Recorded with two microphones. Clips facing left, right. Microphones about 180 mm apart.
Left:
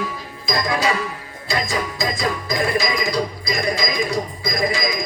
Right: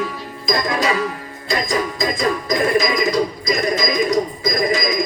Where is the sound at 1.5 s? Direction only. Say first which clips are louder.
Right 3 dB; 40° right (ahead or behind).